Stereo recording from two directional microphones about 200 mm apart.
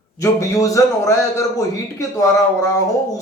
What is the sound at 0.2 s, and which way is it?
A man's voice, 15° left (ahead or behind).